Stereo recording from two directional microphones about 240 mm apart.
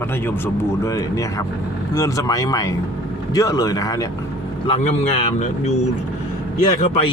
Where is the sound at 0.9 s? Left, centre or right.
Centre.